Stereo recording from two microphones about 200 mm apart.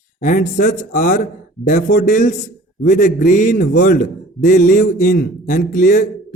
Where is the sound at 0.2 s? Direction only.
40° left (ahead or behind).